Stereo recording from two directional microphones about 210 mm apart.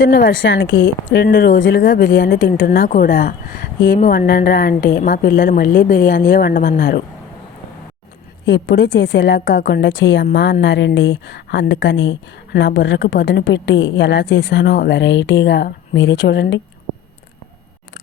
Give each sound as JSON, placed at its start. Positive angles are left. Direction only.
{"t": 0.0, "sound": "speech", "side_deg": 45}
{"t": 0.4, "sound": "speech", "side_deg": 60}
{"t": 8.4, "sound": "a woman's voice", "side_deg": 60}